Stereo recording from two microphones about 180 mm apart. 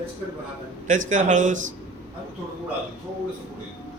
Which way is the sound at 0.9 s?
45° right (ahead or behind).